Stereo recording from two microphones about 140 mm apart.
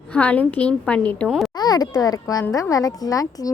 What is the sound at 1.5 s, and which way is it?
A child's voice, 30° left (ahead or behind).